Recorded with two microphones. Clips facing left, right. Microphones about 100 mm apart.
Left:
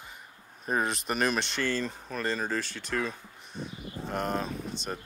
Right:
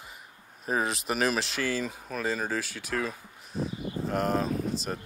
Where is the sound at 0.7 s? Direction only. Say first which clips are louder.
Right 1 dB; centre (ahead or behind).